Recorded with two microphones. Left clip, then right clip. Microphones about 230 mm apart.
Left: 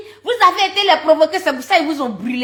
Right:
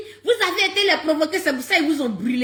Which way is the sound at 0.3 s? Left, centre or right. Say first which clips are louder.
Left 6 dB; centre.